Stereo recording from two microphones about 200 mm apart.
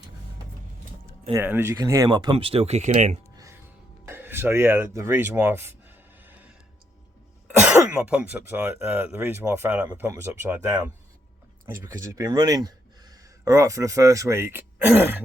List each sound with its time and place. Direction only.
1.3 s speech: 10° right (ahead or behind); by 3.2 s 35° right (ahead or behind)
3.3 s a sound: 15° right (ahead or behind)
4.0 s speech: 10° right (ahead or behind)
7.4 s speech: 5° right (ahead or behind)